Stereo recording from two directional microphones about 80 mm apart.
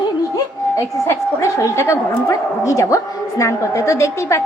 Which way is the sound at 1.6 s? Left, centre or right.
Left.